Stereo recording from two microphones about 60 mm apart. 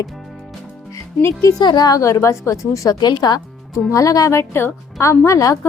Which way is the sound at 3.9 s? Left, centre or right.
Left.